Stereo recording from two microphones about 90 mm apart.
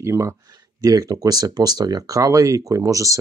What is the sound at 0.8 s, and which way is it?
Speech, 45° right (ahead or behind).